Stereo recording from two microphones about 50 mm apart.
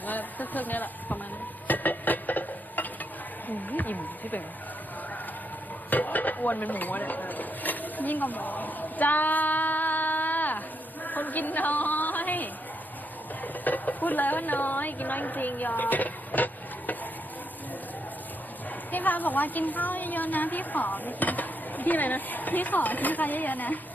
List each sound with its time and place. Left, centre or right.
0.1 s a woman's voice: left
1.6 s stir: left
3.7 s a woman's voice: left
5.9 s dishes: left
11.0 s a sound: left
18.9 s a woman's voice: left